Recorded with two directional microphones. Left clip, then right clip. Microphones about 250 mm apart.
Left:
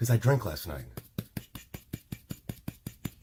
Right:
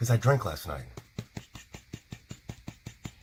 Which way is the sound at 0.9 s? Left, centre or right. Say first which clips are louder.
Left 2 dB; left.